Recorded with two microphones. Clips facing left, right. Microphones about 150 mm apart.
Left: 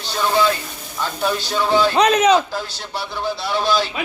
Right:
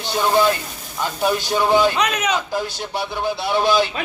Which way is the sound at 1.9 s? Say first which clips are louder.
Left 7 dB; 30° left (ahead or behind).